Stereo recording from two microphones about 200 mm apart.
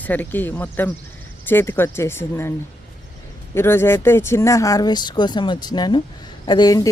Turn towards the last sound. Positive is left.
turn(degrees=20)  # may be behind; listen again after turning